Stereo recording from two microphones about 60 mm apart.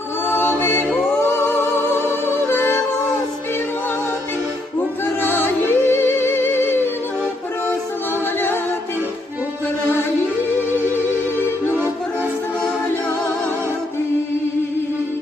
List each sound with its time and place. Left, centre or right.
0.3 s music: left
2.0 s music: left
5.2 s music: left
10.7 s music: left